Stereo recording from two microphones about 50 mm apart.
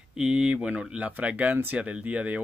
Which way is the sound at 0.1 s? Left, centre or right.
Centre.